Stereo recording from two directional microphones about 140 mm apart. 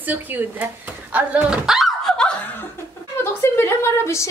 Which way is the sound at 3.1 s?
20° left (ahead or behind).